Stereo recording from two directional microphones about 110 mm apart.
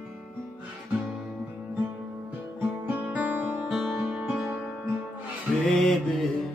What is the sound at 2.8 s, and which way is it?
Music, 15° right (ahead or behind).